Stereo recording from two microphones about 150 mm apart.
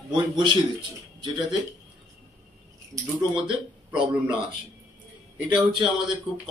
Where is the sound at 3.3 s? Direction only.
35° right (ahead or behind).